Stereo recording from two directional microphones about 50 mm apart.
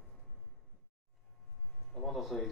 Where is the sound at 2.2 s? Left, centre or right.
Centre.